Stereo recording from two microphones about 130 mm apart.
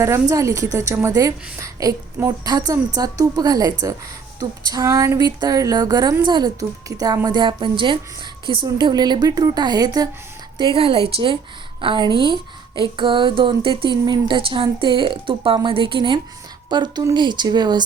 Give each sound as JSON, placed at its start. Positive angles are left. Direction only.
{"t": 0.0, "sound": "a woman's voice", "side_deg": -20}
{"t": 10.8, "sound": "a woman's voice", "side_deg": -45}